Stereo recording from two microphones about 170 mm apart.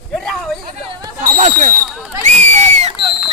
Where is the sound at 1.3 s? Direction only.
45° right (ahead or behind).